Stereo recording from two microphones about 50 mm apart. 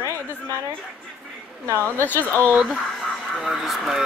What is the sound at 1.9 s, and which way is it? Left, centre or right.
Speech, left.